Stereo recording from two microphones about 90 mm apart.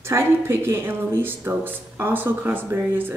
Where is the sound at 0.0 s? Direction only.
30° right (ahead or behind).